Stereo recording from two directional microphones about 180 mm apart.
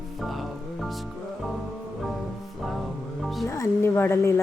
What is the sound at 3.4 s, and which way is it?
Speech, 15° left (ahead or behind).